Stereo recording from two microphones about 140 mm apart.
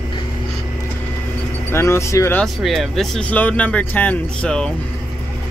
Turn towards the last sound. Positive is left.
turn(degrees=5)  # may be behind; listen again after turning